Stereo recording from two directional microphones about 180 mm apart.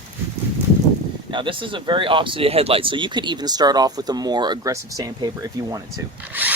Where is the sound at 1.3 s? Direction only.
30° right (ahead or behind).